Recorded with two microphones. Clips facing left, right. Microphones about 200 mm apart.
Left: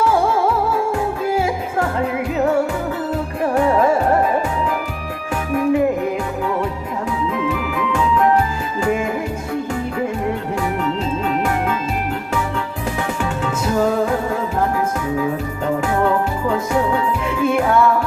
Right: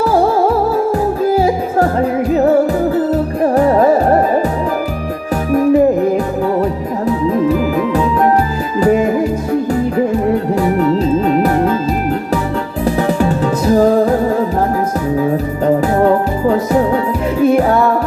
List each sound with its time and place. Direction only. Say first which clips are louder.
0.0 s music: right 5 dB; 35° right (ahead or behind)
5.5 s music: right 6 dB; 35° right (ahead or behind)
7.3 s music: right 8 dB; 35° right (ahead or behind)
10.6 s music: right 8 dB; 40° right (ahead or behind)
13.0 s music: right 8 dB; 35° right (ahead or behind)